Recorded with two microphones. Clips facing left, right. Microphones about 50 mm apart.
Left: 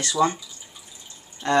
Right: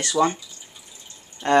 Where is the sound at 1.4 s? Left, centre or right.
Right.